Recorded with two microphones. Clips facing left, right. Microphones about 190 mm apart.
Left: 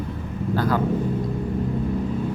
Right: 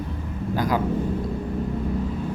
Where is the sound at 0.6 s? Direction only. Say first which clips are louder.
Left 1 dB; 15° right (ahead or behind).